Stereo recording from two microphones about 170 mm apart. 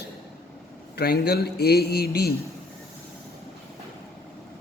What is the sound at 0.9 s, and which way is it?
A man's voice, 70° left (ahead or behind).